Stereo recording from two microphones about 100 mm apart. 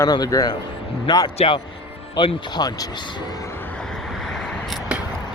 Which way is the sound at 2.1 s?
45° left (ahead or behind).